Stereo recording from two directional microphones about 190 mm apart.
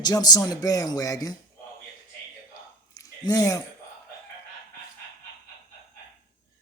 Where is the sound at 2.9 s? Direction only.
20° left (ahead or behind).